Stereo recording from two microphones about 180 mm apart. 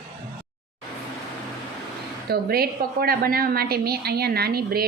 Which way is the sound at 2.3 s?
60° right (ahead or behind).